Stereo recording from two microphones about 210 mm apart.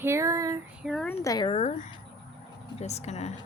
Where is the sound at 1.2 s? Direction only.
20° left (ahead or behind).